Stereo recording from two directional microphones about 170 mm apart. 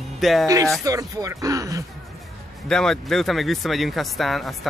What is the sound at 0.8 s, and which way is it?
Speech, 20° right (ahead or behind).